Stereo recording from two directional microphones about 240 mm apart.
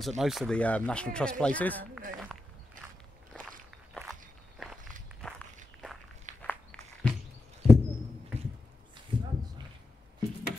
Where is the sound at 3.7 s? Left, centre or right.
Centre.